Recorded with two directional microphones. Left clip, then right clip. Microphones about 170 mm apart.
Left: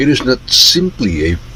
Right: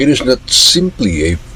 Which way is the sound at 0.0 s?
15° left (ahead or behind).